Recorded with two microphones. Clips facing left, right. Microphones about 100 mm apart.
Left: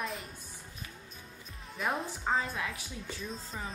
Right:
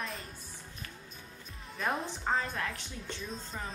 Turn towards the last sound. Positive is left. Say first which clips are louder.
# even
turn(degrees=0)  # may be behind; listen again after turning